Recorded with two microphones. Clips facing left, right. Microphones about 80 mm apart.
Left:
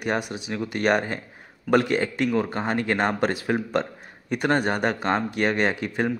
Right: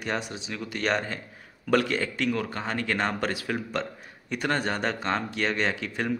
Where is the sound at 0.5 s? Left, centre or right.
Left.